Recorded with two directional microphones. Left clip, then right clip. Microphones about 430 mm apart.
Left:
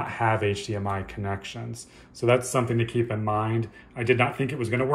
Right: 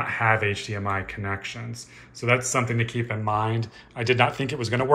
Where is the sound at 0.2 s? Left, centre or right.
Centre.